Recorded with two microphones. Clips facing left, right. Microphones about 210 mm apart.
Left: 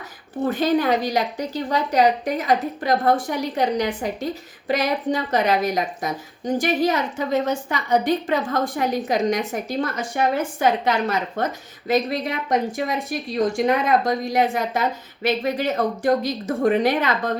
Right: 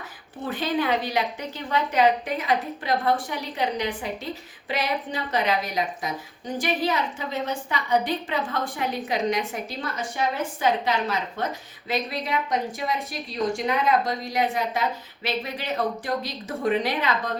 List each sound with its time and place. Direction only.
0.4 s a woman's voice: 40° left (ahead or behind)